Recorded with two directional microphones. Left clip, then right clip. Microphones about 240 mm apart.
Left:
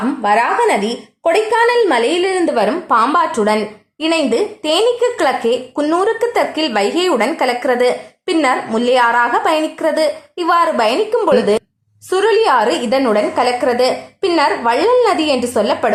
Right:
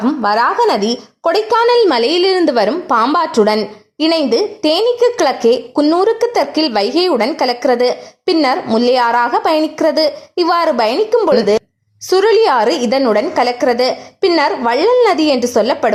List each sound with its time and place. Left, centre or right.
0.3 s a woman's voice: right